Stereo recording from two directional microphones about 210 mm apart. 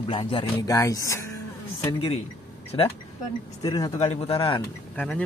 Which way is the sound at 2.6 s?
25° left (ahead or behind).